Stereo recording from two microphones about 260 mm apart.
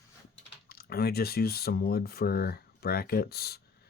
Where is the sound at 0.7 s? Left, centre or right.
Left.